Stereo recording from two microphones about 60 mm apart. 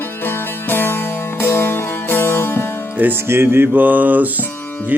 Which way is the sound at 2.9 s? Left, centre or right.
Right.